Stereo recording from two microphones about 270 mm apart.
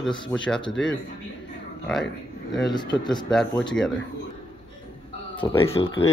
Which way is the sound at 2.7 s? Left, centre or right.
Centre.